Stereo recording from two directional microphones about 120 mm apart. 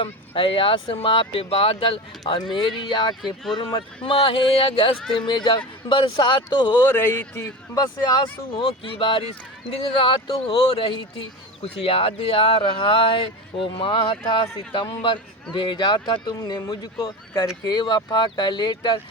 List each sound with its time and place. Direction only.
0.0 s speech: 50° left (ahead or behind)
6.9 s speech: 15° left (ahead or behind)
7.4 s speech: 30° left (ahead or behind)
8.5 s speech: 45° left (ahead or behind)